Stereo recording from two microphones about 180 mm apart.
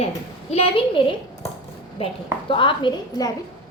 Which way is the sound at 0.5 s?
35° left (ahead or behind).